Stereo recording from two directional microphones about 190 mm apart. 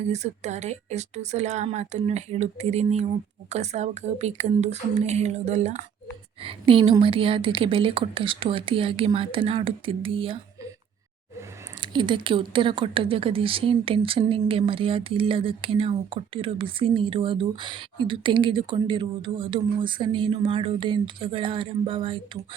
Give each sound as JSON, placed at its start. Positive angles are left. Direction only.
{"t": 0.0, "sound": "speech", "side_deg": -35}